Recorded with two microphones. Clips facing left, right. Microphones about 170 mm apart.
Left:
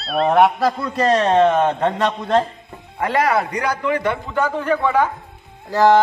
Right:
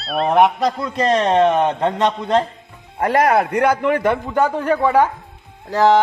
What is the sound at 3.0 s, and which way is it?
A man's voice, 45° right (ahead or behind).